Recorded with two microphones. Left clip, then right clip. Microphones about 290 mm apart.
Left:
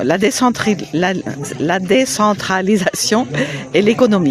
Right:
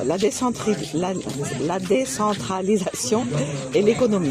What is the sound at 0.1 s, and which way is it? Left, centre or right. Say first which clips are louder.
Speech: left 8 dB; left.